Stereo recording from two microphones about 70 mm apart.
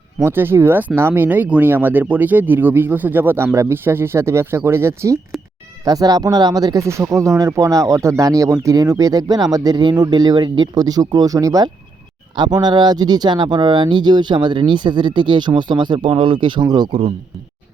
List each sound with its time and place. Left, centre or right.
0.2 s speech: right
5.8 s speech: right
6.8 s speech: right
12.4 s speech: right